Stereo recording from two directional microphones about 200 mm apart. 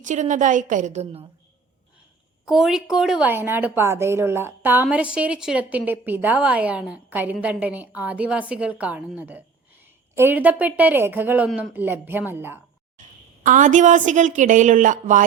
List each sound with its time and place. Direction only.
0.0 s a woman's voice: 40° right (ahead or behind)
2.5 s a woman's voice: centre (ahead or behind)
13.4 s a woman's voice: 40° right (ahead or behind)